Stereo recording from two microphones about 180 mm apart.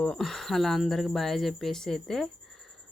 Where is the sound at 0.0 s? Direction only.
5° left (ahead or behind).